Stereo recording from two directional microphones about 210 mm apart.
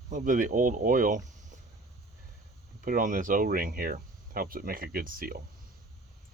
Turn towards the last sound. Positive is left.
turn(degrees=-45)  # may be behind; listen again after turning